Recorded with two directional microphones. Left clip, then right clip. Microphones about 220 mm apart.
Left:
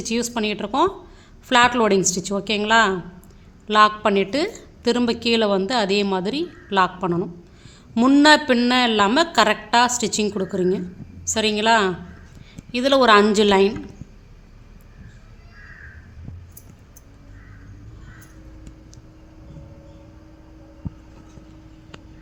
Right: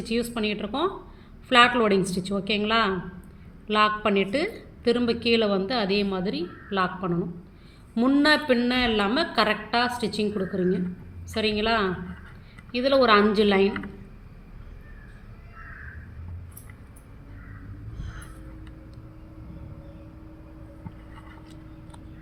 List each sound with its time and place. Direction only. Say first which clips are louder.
0.0 s a woman's voice: left 4 dB; 40° left (ahead or behind)